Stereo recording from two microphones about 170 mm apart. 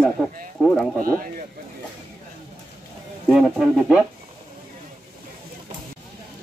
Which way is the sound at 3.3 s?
Centre (ahead or behind).